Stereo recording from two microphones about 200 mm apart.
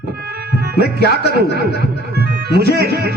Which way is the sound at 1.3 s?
55° right (ahead or behind).